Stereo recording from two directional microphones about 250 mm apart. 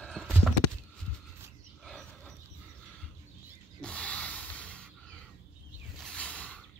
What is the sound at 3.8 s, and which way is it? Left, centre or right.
Rub, centre.